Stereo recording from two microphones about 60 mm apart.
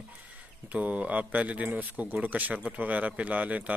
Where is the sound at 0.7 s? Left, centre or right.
Right.